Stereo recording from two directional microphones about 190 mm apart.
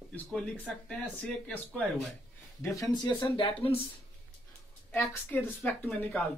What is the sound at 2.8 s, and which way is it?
Speech, 20° left (ahead or behind).